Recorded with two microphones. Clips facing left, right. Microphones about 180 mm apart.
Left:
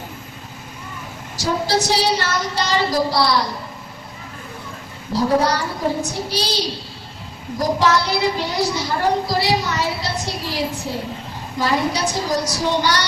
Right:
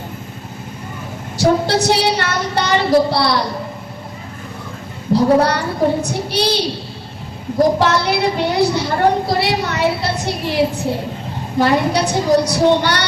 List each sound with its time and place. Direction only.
1.4 s a woman's voice: 60° right (ahead or behind)
5.4 s a woman's voice: 60° right (ahead or behind)
7.8 s a woman's voice: 60° right (ahead or behind)